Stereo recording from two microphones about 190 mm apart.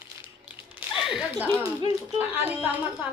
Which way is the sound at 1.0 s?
Centre (ahead or behind).